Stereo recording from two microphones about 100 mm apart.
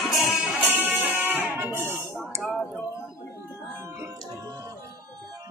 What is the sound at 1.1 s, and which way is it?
Music, 20° right (ahead or behind).